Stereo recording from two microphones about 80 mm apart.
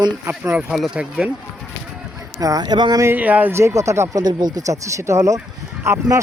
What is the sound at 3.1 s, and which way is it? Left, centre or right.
Speech, right.